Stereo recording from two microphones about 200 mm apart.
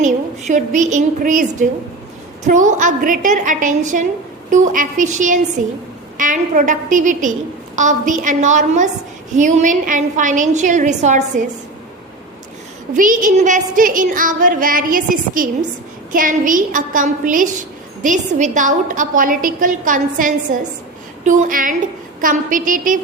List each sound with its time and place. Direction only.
0.0 s a woman's voice: 35° right (ahead or behind)
12.9 s a woman's voice: 40° right (ahead or behind)